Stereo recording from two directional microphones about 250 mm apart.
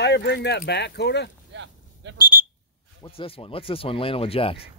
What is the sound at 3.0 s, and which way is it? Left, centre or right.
Speech, left.